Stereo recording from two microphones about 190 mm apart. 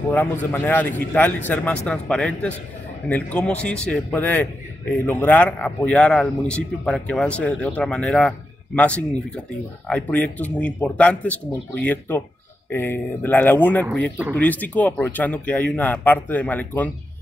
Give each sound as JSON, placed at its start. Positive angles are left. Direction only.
{"t": 0.1, "sound": "a man's voice", "side_deg": 10}